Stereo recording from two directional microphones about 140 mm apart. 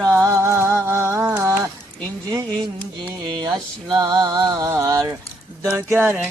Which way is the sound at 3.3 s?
30° right (ahead or behind).